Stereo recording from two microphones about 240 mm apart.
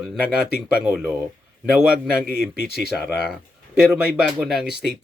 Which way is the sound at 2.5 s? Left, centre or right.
Left.